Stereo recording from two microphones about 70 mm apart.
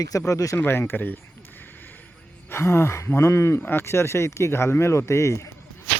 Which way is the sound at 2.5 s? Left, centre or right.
Left.